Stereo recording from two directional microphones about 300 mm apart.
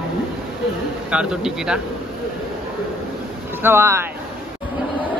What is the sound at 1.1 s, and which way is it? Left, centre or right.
Speech, centre.